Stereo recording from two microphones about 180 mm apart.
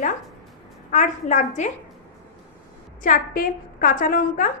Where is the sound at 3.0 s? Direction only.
50° left (ahead or behind).